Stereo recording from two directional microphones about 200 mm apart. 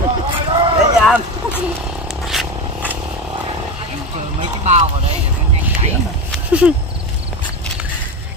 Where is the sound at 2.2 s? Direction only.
Centre (ahead or behind).